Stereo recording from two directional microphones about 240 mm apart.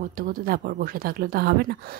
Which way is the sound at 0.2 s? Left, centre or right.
Right.